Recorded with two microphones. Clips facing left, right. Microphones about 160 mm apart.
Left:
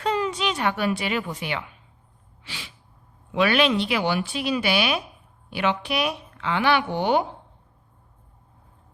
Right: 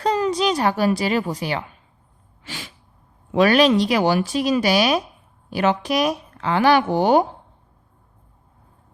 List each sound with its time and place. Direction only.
0.0 s speech: 40° right (ahead or behind)
2.4 s sneeze: 45° right (ahead or behind)
3.3 s speech: 40° right (ahead or behind)